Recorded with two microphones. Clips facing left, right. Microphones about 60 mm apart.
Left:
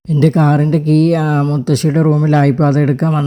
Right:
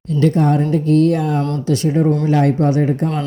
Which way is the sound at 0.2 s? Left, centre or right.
Left.